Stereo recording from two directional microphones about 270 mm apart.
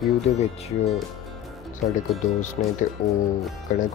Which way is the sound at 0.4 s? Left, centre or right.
Left.